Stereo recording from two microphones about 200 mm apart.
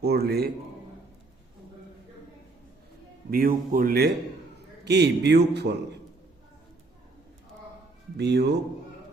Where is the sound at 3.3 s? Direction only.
45° right (ahead or behind).